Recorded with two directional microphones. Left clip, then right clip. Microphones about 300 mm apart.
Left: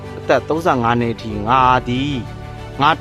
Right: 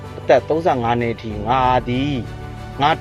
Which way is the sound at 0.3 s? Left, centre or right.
Centre.